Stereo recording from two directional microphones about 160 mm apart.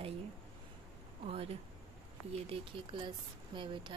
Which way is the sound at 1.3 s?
35° right (ahead or behind).